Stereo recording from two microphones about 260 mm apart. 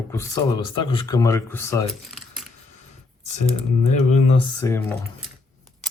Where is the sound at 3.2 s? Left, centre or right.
Left.